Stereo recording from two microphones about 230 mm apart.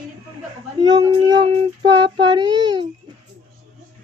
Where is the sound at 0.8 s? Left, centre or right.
Right.